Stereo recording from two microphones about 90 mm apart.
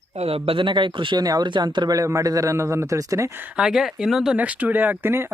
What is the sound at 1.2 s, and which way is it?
Speech, 45° right (ahead or behind).